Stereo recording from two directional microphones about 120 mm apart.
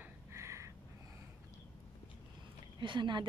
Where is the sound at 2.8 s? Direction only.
40° right (ahead or behind).